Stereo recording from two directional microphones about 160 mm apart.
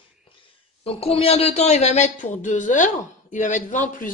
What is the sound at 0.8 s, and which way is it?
A woman's voice, 35° left (ahead or behind).